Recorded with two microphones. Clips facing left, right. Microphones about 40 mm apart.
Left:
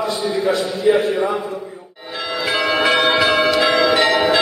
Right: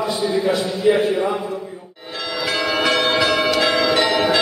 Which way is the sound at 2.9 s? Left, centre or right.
Centre.